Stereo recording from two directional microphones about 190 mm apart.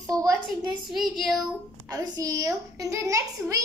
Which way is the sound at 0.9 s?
Centre (ahead or behind).